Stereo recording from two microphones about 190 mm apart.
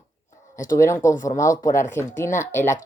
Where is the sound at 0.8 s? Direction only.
15° left (ahead or behind).